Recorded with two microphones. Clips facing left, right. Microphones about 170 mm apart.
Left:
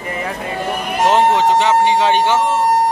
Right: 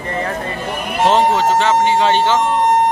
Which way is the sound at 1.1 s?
15° left (ahead or behind).